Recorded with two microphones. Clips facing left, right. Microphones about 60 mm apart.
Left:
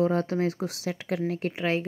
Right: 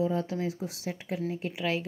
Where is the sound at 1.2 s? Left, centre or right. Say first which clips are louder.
Left 4 dB; left.